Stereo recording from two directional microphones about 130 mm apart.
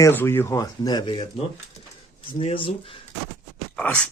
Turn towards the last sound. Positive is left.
turn(degrees=10)  # may be behind; listen again after turning